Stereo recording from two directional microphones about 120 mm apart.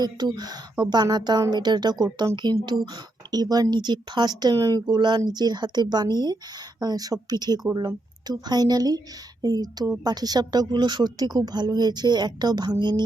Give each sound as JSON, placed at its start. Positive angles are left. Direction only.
{"t": 0.0, "sound": "speech", "side_deg": -35}